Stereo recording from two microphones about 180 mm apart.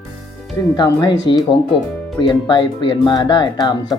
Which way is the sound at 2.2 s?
25° left (ahead or behind).